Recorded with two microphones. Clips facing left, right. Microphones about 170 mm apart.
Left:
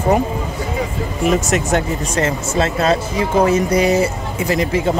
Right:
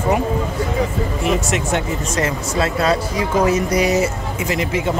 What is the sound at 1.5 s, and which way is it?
Speech, 40° left (ahead or behind).